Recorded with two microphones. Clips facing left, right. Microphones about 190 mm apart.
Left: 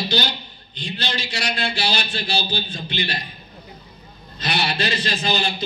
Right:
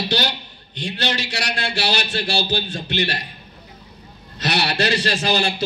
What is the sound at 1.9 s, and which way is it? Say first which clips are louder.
A man's voice: right 2 dB; 80° right.